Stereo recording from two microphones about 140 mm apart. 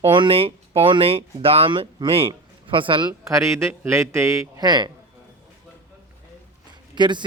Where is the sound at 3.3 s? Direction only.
20° right (ahead or behind).